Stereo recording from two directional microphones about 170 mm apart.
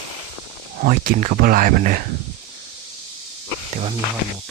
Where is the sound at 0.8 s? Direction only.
55° right (ahead or behind).